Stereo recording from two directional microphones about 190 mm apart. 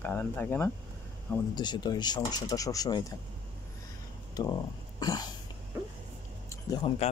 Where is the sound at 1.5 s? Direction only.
25° left (ahead or behind).